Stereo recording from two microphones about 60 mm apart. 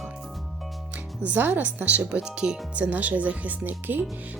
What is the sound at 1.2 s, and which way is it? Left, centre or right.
Speech, right.